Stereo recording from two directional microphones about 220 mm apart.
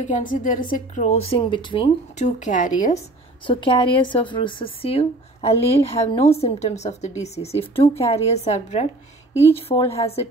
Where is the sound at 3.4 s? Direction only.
20° left (ahead or behind).